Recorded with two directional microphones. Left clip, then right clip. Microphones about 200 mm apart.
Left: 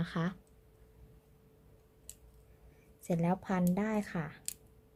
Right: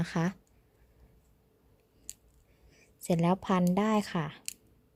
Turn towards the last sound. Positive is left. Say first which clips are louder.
# right 6 dB
turn(degrees=-40)  # may be behind; listen again after turning